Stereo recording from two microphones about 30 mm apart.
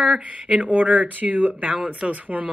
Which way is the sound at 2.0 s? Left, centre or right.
Right.